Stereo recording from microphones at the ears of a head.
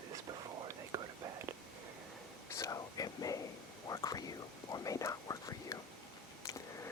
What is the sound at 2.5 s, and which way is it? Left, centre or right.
Whispering, left.